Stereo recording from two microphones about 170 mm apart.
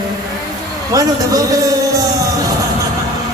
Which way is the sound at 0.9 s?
20° right (ahead or behind).